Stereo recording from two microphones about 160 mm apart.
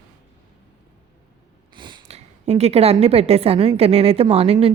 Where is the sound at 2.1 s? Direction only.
40° right (ahead or behind).